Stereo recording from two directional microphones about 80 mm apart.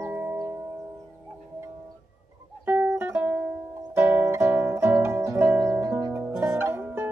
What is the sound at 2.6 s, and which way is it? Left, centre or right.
Music, right.